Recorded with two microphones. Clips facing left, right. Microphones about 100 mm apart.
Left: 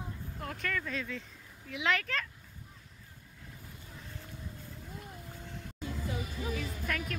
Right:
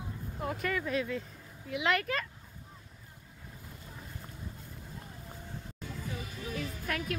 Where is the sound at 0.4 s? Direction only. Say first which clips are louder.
Right 4 dB; 5° right (ahead or behind).